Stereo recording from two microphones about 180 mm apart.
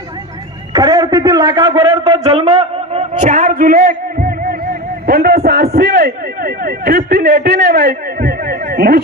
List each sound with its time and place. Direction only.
0.7 s a man's voice: 20° right (ahead or behind); by 9.0 s 55° right (ahead or behind)